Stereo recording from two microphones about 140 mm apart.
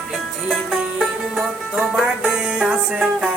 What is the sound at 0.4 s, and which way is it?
Music, centre (ahead or behind).